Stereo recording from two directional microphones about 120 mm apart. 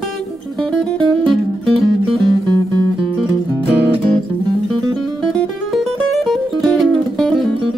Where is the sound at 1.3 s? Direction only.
50° right (ahead or behind).